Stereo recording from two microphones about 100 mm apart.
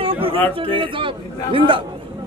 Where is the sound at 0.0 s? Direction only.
65° right (ahead or behind).